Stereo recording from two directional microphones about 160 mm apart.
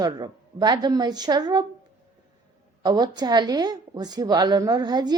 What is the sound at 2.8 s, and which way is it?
A woman's voice, 25° right (ahead or behind).